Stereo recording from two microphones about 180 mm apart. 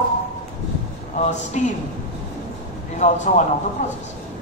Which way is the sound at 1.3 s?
40° left (ahead or behind).